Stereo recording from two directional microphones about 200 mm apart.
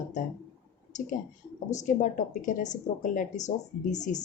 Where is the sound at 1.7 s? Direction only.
40° left (ahead or behind).